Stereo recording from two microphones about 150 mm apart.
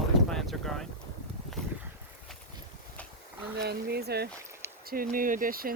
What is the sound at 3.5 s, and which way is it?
Speech, 90° right.